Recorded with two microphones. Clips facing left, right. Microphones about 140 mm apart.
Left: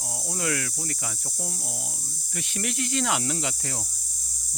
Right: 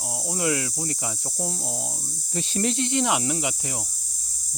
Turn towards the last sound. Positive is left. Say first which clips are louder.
# right 3 dB
turn(degrees=-20)  # may be behind; listen again after turning